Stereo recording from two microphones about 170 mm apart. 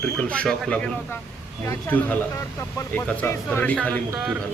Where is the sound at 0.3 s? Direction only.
5° left (ahead or behind).